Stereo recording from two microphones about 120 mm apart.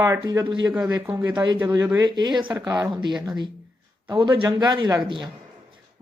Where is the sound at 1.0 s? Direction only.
15° right (ahead or behind).